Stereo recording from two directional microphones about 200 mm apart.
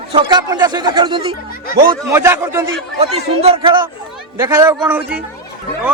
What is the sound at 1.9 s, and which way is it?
Speech, 15° right (ahead or behind).